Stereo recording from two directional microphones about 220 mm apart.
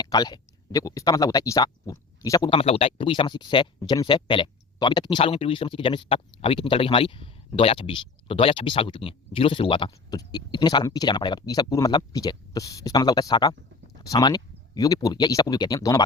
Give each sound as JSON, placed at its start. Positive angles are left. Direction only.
{"t": 0.0, "sound": "speech", "side_deg": 15}